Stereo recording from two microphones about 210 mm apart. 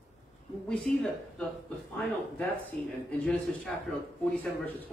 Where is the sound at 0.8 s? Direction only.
5° left (ahead or behind).